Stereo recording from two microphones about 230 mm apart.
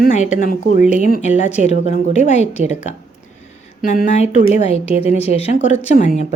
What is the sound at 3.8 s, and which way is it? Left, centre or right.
Speech, left.